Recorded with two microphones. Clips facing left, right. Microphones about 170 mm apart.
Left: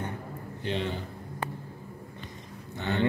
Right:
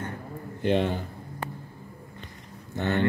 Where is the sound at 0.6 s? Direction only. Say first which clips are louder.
Right 7 dB; 55° right (ahead or behind).